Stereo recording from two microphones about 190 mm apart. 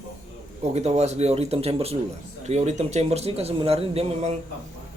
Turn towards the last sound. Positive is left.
turn(degrees=-30)  # may be behind; listen again after turning